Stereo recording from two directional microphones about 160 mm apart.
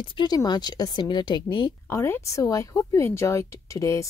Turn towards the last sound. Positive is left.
turn(degrees=20)  # may be behind; listen again after turning